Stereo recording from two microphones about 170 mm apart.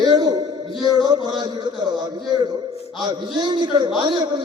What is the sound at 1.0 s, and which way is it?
A man's voice, 25° right (ahead or behind).